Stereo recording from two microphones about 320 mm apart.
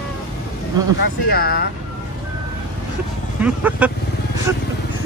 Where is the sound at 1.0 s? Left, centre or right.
Left.